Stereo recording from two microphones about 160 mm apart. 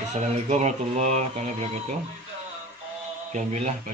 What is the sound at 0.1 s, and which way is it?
Mantra, 45° right (ahead or behind).